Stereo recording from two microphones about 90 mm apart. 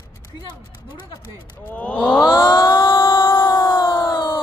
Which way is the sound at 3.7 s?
60° left (ahead or behind).